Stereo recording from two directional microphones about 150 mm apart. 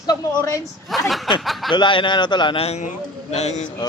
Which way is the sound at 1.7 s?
30° left (ahead or behind).